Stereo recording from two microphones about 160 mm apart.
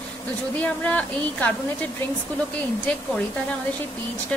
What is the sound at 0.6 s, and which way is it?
Speech, 10° left (ahead or behind).